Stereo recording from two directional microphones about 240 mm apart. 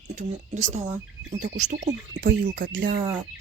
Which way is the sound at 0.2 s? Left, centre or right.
Right.